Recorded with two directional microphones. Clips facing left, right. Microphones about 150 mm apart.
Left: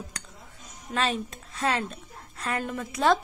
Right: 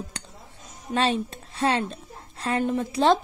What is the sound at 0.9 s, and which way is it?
A woman's voice, 30° right (ahead or behind).